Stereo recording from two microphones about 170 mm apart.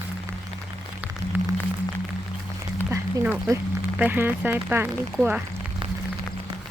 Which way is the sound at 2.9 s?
10° right (ahead or behind).